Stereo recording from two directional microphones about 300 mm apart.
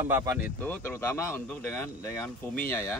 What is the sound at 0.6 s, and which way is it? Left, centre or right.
Speech, centre.